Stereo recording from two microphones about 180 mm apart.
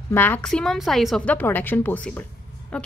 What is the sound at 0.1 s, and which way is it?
A woman's voice, 10° left (ahead or behind).